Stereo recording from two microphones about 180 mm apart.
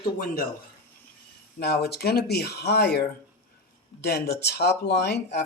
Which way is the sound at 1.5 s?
65° left (ahead or behind).